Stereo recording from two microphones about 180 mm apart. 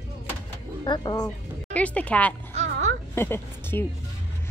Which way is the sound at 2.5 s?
40° right (ahead or behind).